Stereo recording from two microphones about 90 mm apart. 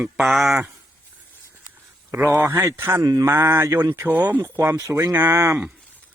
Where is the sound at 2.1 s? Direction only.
20° right (ahead or behind).